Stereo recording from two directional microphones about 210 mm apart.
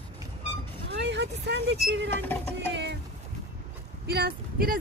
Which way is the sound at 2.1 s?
10° left (ahead or behind).